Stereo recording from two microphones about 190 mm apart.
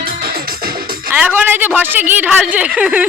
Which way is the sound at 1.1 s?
10° right (ahead or behind).